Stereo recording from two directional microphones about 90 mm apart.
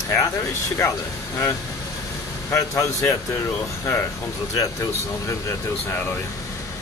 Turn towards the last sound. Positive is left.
turn(degrees=30)  # may be behind; listen again after turning